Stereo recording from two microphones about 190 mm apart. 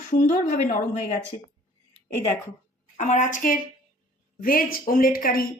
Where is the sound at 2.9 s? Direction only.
40° left (ahead or behind).